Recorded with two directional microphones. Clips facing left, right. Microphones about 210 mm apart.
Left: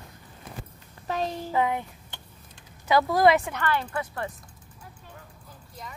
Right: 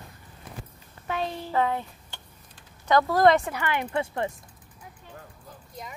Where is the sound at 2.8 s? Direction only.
10° left (ahead or behind).